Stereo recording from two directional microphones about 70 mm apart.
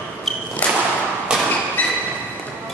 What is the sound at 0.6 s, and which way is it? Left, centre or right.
Whip, left.